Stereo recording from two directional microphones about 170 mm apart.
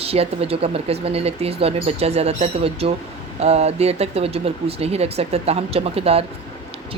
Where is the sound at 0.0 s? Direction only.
35° right (ahead or behind).